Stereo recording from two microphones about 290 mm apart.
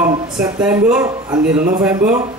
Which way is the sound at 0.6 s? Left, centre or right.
Centre.